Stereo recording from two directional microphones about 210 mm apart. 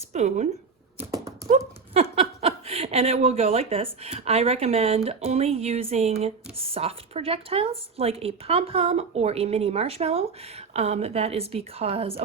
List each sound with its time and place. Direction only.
0.1 s speech: 30° right (ahead or behind)